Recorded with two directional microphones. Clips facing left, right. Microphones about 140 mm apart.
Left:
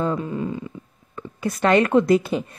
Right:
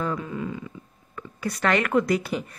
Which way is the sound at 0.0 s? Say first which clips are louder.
Left 5 dB; 30° left (ahead or behind).